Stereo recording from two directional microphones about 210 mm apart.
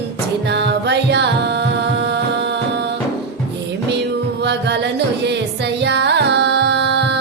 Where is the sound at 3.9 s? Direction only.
55° right (ahead or behind).